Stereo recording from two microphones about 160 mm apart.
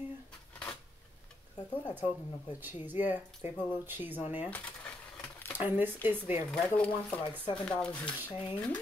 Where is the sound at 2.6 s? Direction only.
10° right (ahead or behind).